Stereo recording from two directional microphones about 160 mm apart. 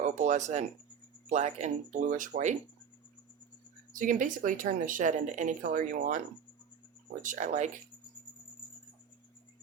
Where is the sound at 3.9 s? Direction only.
55° right (ahead or behind).